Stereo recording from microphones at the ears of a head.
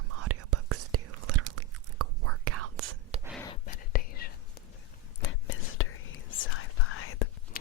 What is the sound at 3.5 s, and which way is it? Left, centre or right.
Whispering, left.